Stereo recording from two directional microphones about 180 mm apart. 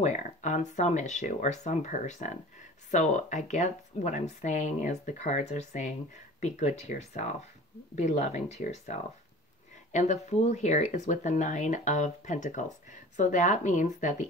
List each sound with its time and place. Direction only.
0.0 s speech: 40° left (ahead or behind)